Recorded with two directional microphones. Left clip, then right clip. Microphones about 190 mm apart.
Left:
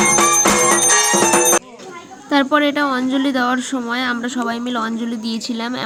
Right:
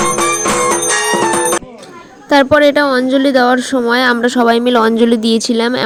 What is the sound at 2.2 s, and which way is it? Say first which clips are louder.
Speech: right 7 dB; 30° right (ahead or behind).